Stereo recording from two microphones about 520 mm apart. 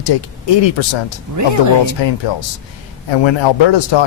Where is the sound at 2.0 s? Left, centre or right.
Left.